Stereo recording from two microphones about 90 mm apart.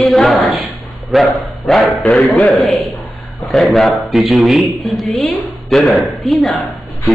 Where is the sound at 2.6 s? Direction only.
Centre (ahead or behind).